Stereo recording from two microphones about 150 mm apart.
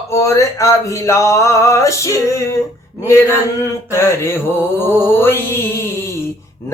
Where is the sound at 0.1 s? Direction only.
20° left (ahead or behind).